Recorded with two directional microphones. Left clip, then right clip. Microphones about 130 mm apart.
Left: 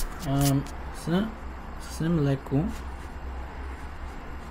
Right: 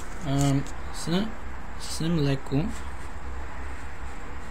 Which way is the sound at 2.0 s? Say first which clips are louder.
Left 1 dB; 5° left (ahead or behind).